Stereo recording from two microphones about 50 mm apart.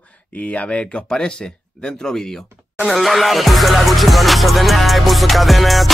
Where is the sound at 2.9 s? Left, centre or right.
Centre.